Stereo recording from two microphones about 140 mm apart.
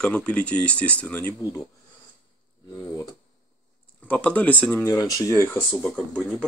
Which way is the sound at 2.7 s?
25° left (ahead or behind).